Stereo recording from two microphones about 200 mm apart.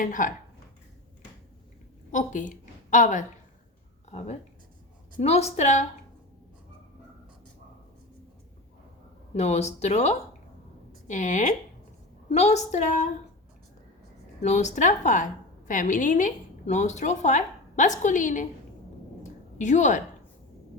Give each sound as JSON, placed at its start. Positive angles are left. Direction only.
{"t": 0.0, "sound": "speech", "side_deg": 40}
{"t": 2.1, "sound": "a woman's voice", "side_deg": 40}
{"t": 9.3, "sound": "speech", "side_deg": 35}
{"t": 14.4, "sound": "a woman's voice", "side_deg": 35}
{"t": 19.2, "sound": "a sound", "side_deg": 35}